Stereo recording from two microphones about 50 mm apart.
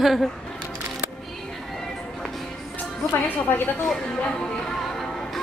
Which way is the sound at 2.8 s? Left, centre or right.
Left.